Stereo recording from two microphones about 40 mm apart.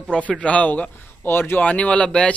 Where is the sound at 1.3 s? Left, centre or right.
Left.